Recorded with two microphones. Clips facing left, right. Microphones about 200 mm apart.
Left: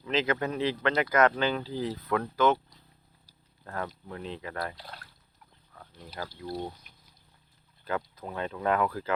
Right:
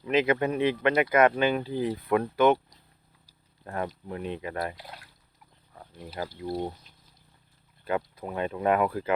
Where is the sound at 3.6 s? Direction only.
15° right (ahead or behind).